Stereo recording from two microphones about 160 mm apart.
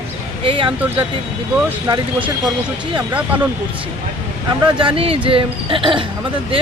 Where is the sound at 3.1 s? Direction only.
10° right (ahead or behind).